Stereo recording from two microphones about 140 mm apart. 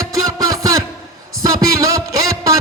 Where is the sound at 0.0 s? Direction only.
25° right (ahead or behind).